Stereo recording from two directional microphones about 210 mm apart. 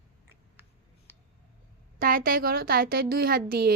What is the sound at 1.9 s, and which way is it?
A woman's voice, 40° right (ahead or behind).